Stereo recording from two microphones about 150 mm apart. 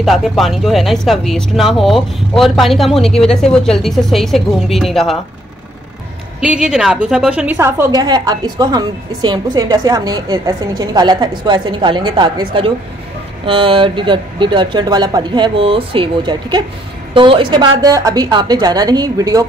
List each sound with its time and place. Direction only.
0.0 s speech: centre (ahead or behind)
6.4 s a woman's voice: 5° right (ahead or behind)
8.0 s a woman's voice: 25° right (ahead or behind)